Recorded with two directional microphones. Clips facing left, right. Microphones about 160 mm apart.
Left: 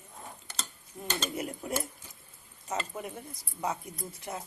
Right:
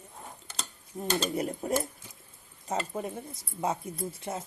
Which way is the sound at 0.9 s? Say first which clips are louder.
Right 5 dB; 35° right (ahead or behind).